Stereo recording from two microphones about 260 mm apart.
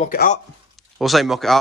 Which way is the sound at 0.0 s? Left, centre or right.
Left.